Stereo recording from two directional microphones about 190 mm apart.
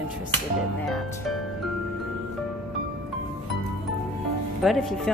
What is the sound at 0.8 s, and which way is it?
Speech, centre (ahead or behind).